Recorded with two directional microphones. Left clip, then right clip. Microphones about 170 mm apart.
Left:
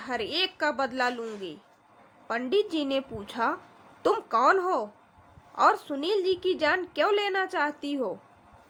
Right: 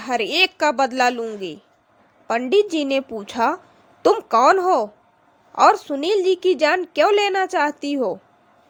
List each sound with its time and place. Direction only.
0.0 s a woman's voice: 40° right (ahead or behind)